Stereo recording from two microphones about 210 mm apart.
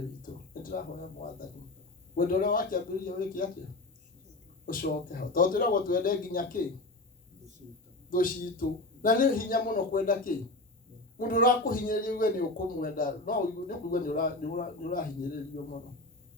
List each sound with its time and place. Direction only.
0.2 s a sound: 40° left (ahead or behind)
2.1 s speech: 40° left (ahead or behind)
4.6 s speech: 40° left (ahead or behind)
8.1 s speech: 40° left (ahead or behind)